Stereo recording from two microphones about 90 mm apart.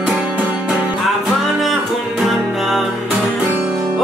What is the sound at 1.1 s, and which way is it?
Music, centre (ahead or behind).